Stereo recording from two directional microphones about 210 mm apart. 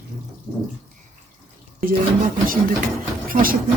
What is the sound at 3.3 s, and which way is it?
Speech, 40° right (ahead or behind).